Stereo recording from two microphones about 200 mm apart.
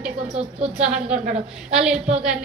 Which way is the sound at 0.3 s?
30° right (ahead or behind).